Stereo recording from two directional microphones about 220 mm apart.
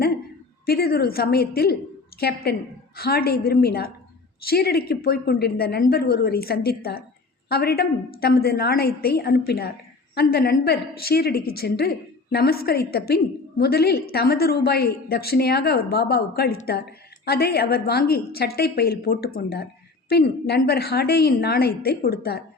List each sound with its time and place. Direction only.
0.6 s a woman's voice: 45° left (ahead or behind)